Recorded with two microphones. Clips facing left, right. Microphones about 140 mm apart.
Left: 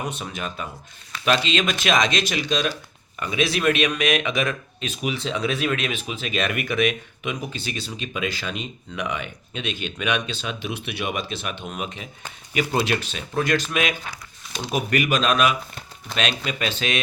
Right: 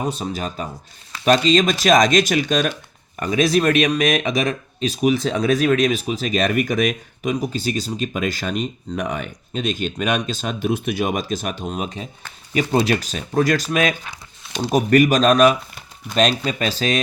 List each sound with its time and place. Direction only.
0.0 s speech: 35° right (ahead or behind)